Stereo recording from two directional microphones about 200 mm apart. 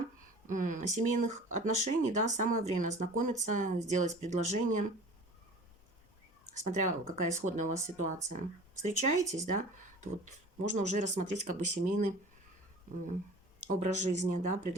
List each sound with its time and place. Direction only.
0.4 s speech: 40° right (ahead or behind)
6.6 s speech: 35° right (ahead or behind)
7.0 s speech: 15° right (ahead or behind)
7.4 s speech: 35° right (ahead or behind)
13.7 s speech: 35° right (ahead or behind)